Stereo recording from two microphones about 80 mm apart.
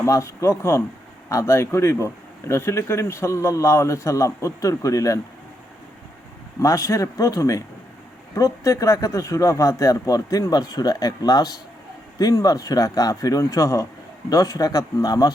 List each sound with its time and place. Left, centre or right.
0.0 s speech: left
6.6 s speech: left